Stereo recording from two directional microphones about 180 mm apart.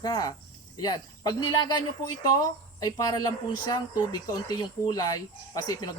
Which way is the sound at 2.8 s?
20° left (ahead or behind).